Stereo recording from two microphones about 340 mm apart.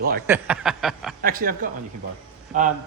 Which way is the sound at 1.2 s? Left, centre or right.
Right.